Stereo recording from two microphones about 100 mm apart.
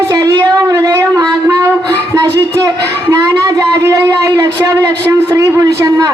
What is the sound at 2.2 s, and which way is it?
Speech, 40° right (ahead or behind).